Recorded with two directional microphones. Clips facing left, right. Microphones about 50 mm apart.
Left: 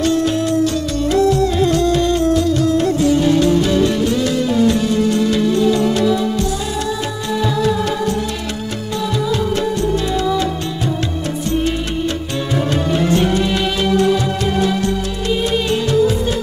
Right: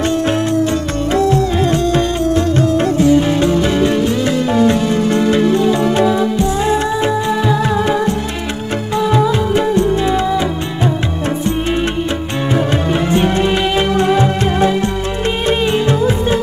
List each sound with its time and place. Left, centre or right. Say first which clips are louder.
1.1 s music: even; right
3.3 s music: even; right